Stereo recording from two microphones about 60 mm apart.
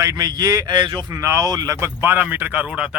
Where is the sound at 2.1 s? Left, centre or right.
Right.